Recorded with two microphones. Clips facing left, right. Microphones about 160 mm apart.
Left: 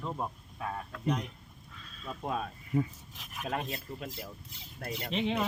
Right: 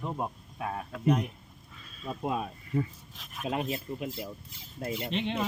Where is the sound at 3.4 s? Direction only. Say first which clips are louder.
Right 4 dB; 20° right (ahead or behind).